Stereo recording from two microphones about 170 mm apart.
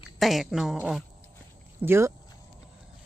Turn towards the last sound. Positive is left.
turn(degrees=-15)  # may be behind; listen again after turning